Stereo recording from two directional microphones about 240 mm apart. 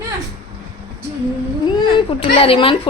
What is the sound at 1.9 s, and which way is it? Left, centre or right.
Speech, left.